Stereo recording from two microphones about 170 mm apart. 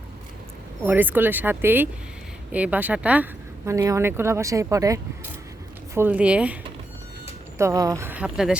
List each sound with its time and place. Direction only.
0.9 s speech: 10° right (ahead or behind)
7.6 s speech: 20° right (ahead or behind)